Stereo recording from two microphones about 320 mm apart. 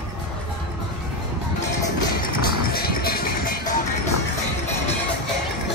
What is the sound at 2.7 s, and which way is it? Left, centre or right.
Music, left.